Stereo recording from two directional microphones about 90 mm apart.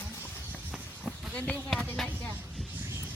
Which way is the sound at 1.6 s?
Centre (ahead or behind).